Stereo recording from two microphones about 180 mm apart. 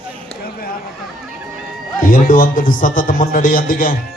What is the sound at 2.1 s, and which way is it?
A man's voice, 50° left (ahead or behind).